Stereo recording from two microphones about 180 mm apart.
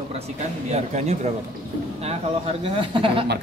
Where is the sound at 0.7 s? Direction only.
35° right (ahead or behind).